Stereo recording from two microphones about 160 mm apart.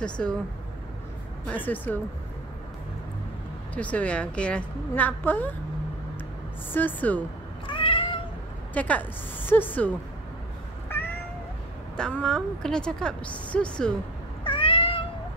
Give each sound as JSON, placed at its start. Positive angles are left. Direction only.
{"t": 0.0, "sound": "a woman's voice", "side_deg": 5}
{"t": 1.5, "sound": "a woman's voice", "side_deg": 10}
{"t": 3.7, "sound": "a woman's voice", "side_deg": 10}
{"t": 6.7, "sound": "a woman's voice", "side_deg": 10}
{"t": 7.6, "sound": "cat", "side_deg": 30}
{"t": 8.7, "sound": "a woman's voice", "side_deg": 10}
{"t": 12.0, "sound": "a woman's voice", "side_deg": 5}
{"t": 14.4, "sound": "cat", "side_deg": 35}